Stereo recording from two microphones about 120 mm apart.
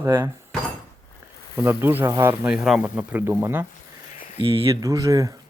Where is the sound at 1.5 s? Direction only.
20° right (ahead or behind).